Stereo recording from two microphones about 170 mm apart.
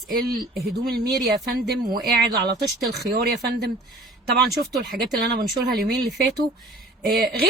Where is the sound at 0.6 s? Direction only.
65° right (ahead or behind).